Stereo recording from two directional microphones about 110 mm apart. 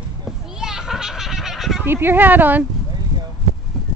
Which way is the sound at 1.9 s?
20° right (ahead or behind).